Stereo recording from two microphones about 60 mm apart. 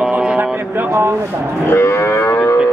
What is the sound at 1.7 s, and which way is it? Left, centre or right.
Livestock, left.